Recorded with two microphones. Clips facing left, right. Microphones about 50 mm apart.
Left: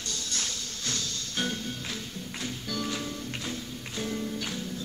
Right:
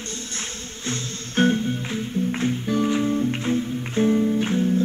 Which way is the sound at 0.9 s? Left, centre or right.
Right.